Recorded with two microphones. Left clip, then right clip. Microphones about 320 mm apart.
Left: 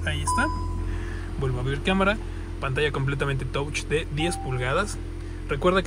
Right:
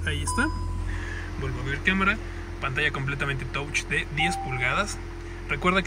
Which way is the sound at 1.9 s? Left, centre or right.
Centre.